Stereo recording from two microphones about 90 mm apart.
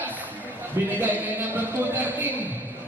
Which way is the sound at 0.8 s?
30° right (ahead or behind).